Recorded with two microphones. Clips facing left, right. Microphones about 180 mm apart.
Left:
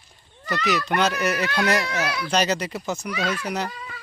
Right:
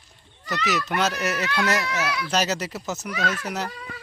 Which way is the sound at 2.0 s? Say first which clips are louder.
Left 1 dB; 35° left (ahead or behind).